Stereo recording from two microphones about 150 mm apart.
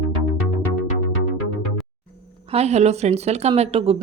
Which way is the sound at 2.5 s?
45° right (ahead or behind).